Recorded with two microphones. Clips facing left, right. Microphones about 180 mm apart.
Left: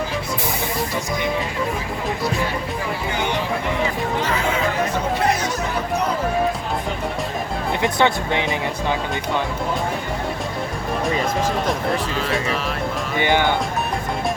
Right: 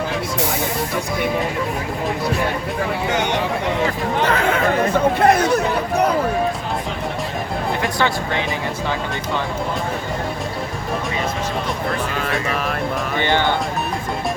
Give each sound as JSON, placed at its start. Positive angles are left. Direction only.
{"t": 4.3, "sound": "chatter", "side_deg": -60}
{"t": 7.8, "sound": "speech", "side_deg": 20}
{"t": 12.2, "sound": "speech", "side_deg": -50}
{"t": 13.1, "sound": "speech", "side_deg": 10}